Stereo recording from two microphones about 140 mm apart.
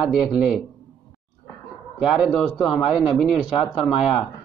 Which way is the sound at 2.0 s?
5° right (ahead or behind).